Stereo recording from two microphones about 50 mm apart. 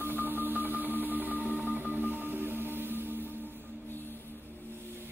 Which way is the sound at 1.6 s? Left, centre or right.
Right.